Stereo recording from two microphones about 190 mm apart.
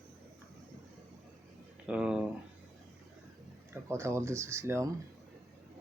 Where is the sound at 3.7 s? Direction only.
15° right (ahead or behind).